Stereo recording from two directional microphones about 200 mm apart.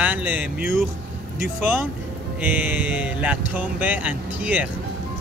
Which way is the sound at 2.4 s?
10° right (ahead or behind).